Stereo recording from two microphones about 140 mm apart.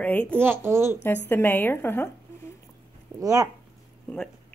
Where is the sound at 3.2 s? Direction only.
25° right (ahead or behind).